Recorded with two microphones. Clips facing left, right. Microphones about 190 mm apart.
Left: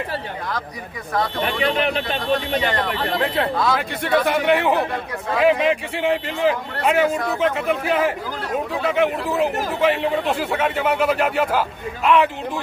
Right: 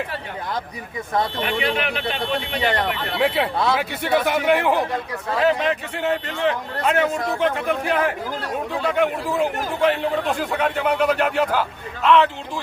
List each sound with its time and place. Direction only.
1.4 s speech: 35° left (ahead or behind)
3.2 s a man's voice: 10° right (ahead or behind); by 12.3 s 15° left (ahead or behind)